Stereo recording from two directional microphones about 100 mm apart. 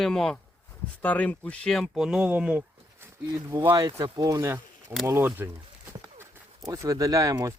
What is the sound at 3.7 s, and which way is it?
Speech, 45° right (ahead or behind).